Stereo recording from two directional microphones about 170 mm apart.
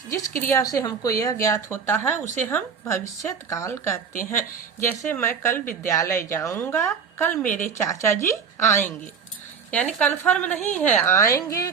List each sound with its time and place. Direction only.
0.1 s speech: 15° left (ahead or behind)
10.0 s speech: 10° left (ahead or behind)